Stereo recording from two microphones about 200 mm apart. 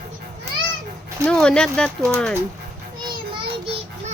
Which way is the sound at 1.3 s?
5° left (ahead or behind).